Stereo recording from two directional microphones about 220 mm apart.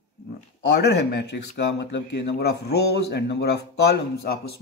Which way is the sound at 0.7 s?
50° left (ahead or behind).